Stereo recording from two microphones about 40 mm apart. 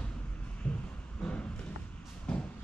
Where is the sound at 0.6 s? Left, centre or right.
Left.